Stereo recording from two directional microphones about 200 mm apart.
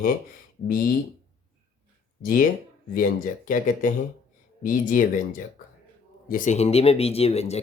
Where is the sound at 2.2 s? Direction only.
45° left (ahead or behind).